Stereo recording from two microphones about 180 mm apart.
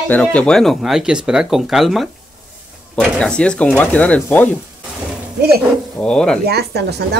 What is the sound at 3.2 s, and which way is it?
Speech, 5° left (ahead or behind).